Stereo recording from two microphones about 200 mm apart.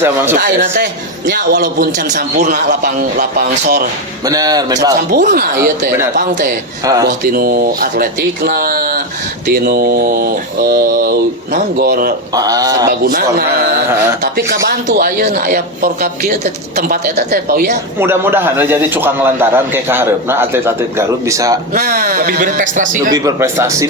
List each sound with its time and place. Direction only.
0.3 s speech: 55° right (ahead or behind)
1.3 s speech: 45° right (ahead or behind)
4.3 s speech: 20° right (ahead or behind)
5.1 s speech: 40° right (ahead or behind)
6.8 s a man's voice: 20° right (ahead or behind)
7.3 s speech: 50° right (ahead or behind)
12.3 s speech: 20° right (ahead or behind)
12.9 s speech: 50° right (ahead or behind)
18.0 s a man's voice: 10° right (ahead or behind)
21.8 s speech: 45° right (ahead or behind)
23.1 s a man's voice: 15° right (ahead or behind)